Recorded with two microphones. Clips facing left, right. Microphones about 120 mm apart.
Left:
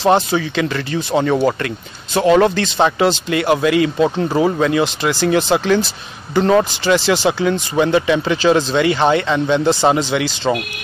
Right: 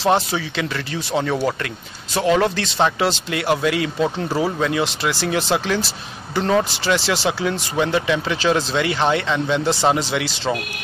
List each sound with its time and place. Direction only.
0.0 s speech: 5° right (ahead or behind)